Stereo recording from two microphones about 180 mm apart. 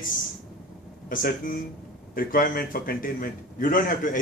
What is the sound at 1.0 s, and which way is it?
A man's voice, 50° left (ahead or behind).